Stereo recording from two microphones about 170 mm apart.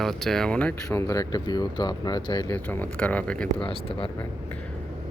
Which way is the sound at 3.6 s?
30° left (ahead or behind).